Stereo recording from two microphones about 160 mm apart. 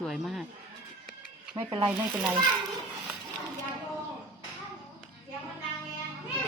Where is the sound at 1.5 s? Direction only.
30° right (ahead or behind).